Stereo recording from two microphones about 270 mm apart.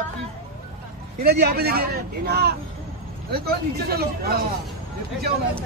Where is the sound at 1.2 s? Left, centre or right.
Right.